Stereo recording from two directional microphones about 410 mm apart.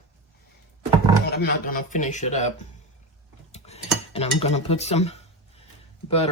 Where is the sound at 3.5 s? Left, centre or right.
Centre.